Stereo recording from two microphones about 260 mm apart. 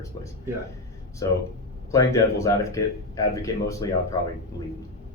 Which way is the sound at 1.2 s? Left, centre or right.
Centre.